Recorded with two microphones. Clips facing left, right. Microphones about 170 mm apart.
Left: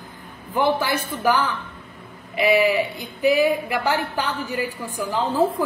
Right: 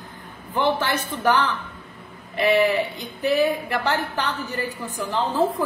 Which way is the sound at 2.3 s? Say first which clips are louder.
Left 1 dB; 10° left (ahead or behind).